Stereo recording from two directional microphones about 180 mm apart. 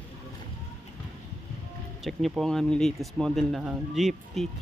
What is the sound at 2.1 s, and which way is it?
Speech, centre (ahead or behind).